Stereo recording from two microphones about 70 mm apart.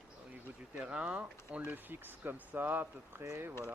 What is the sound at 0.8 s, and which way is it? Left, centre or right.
Speech, centre.